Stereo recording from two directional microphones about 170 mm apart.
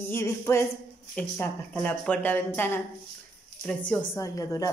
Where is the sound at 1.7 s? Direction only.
5° left (ahead or behind).